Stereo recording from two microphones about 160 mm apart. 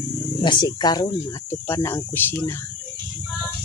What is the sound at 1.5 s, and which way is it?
Speech, 15° left (ahead or behind).